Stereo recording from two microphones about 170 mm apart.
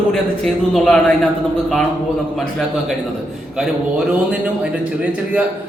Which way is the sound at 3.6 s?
5° right (ahead or behind).